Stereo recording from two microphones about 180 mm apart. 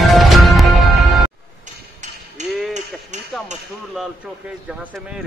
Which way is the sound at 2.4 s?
40° right (ahead or behind).